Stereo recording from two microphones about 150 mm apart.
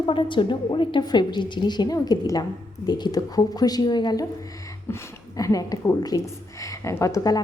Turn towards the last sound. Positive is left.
turn(degrees=25)  # may be behind; listen again after turning